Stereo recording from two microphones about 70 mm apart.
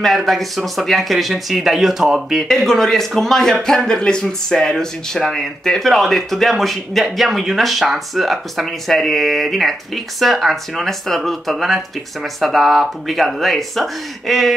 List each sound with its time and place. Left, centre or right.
0.0 s speech: centre
2.4 s speech: centre